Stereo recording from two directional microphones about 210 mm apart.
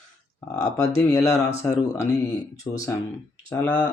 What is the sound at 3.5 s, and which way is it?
Speech, 5° left (ahead or behind).